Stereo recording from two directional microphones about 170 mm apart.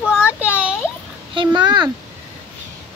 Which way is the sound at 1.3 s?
30° right (ahead or behind).